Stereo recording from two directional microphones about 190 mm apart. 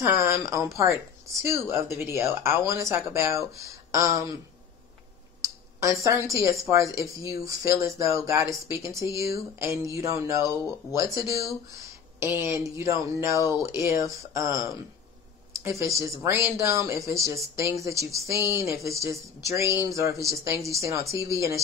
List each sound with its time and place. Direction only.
0.0 s speech: 15° right (ahead or behind)
5.4 s speech: 15° right (ahead or behind)
16.2 s speech: 10° right (ahead or behind)